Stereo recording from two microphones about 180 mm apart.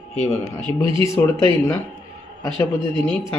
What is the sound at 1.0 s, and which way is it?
Speech, 15° left (ahead or behind).